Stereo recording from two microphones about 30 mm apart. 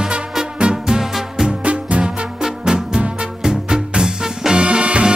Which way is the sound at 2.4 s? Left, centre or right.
Right.